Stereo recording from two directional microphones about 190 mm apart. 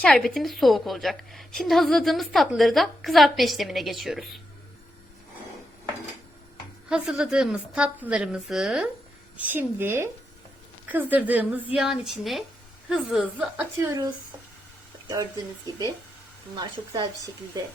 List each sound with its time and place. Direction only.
0.0 s a woman's voice: 5° left (ahead or behind)
6.8 s a woman's voice: 5° right (ahead or behind)
11.1 s a woman's voice: 10° right (ahead or behind)
13.7 s a woman's voice: 15° right (ahead or behind)
15.1 s a woman's voice: 20° right (ahead or behind)
16.6 s a woman's voice: 20° right (ahead or behind)